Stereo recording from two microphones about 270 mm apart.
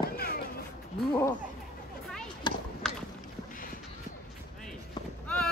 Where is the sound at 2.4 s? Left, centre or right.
Centre.